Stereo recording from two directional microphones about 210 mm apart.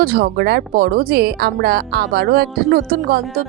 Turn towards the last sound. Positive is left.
turn(degrees=-45)  # may be behind; listen again after turning